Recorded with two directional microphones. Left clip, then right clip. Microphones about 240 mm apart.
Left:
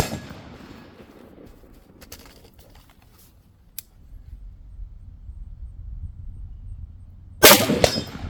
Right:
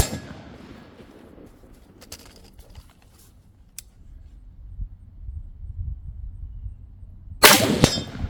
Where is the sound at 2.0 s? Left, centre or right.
Centre.